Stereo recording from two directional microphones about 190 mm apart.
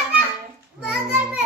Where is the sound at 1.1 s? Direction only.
5° right (ahead or behind).